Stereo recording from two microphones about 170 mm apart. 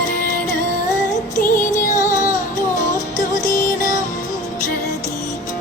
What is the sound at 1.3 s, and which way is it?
Music, 50° left (ahead or behind).